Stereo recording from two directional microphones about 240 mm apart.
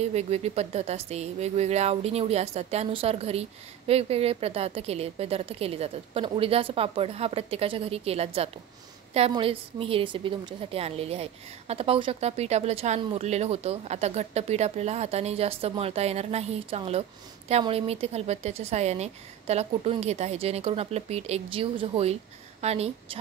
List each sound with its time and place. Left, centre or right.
0.1 s a woman's voice: right